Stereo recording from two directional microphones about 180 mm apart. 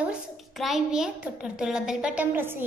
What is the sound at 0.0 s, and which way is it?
A child's voice, 5° right (ahead or behind).